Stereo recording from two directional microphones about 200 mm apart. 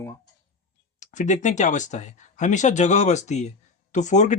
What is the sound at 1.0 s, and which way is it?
Speech, 35° left (ahead or behind).